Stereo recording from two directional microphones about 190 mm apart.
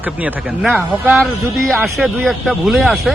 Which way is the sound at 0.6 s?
5° right (ahead or behind).